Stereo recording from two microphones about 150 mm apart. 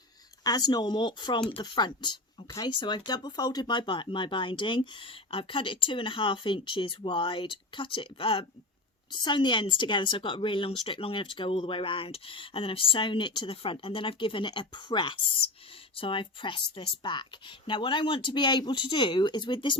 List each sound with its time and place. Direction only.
0.4 s speech: 25° left (ahead or behind)